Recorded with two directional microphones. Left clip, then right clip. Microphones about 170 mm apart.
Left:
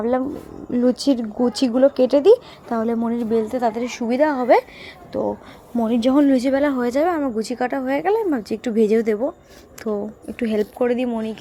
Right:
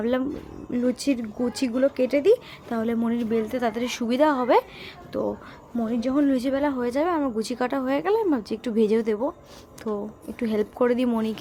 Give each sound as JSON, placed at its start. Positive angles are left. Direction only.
{"t": 0.7, "sound": "speech", "side_deg": 15}
{"t": 5.9, "sound": "speech", "side_deg": 35}
{"t": 10.8, "sound": "speech", "side_deg": 0}